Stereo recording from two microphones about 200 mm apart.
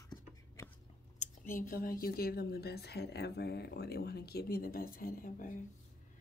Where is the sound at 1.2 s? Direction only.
45° left (ahead or behind).